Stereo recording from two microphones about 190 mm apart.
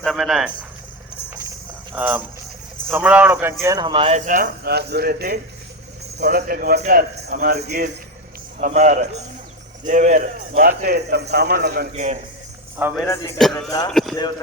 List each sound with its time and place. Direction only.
0.0 s speech: centre (ahead or behind)
1.5 s jingle bell: 10° right (ahead or behind)
2.9 s speech: 10° right (ahead or behind); by 4.2 s 30° right (ahead or behind)
4.3 s speech: 50° right (ahead or behind)
8.6 s a man's voice: 40° right (ahead or behind); by 11.9 s 55° right (ahead or behind)
11.9 s a man's voice: 35° right (ahead or behind)
13.1 s speech: 15° left (ahead or behind)
13.4 s speech: centre (ahead or behind)
13.7 s speech: 20° left (ahead or behind)
13.9 s speech: centre (ahead or behind)
14.2 s speech: 25° left (ahead or behind)